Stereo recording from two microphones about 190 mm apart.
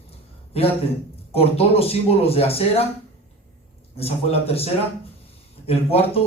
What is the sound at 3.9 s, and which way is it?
A man's voice, 30° left (ahead or behind).